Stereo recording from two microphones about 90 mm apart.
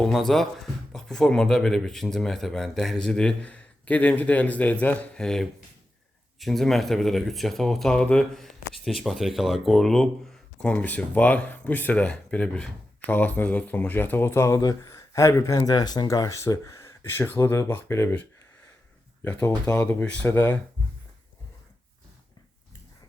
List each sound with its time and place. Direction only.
0.0 s speech: 5° left (ahead or behind); by 18.1 s 30° left (ahead or behind)
19.2 s speech: 25° left (ahead or behind)